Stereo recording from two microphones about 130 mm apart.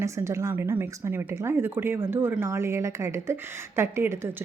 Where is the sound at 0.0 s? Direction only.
25° right (ahead or behind).